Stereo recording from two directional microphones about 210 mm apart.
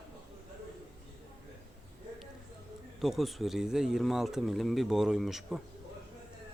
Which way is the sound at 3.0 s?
Centre (ahead or behind).